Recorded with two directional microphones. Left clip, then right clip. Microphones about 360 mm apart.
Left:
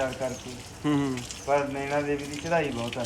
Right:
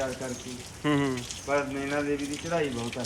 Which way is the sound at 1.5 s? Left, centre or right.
Left.